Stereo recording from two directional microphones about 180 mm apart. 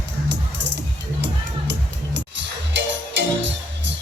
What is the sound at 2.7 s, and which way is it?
Music, 80° right.